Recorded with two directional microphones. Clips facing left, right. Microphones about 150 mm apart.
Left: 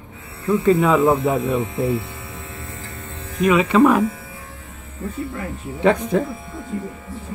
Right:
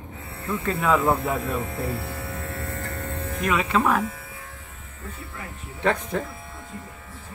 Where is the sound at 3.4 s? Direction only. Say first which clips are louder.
Left 9 dB; 10° left (ahead or behind).